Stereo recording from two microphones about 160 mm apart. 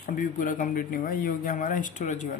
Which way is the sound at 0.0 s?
55° left (ahead or behind).